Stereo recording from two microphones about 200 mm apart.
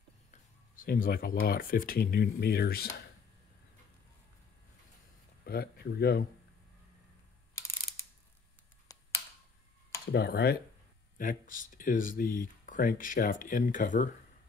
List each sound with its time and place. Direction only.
0.3 s speech: 45° left (ahead or behind)
5.4 s speech: 50° left (ahead or behind)
8.9 s a sound: 15° left (ahead or behind)
10.1 s speech: 55° left (ahead or behind)
11.1 s speech: 40° left (ahead or behind)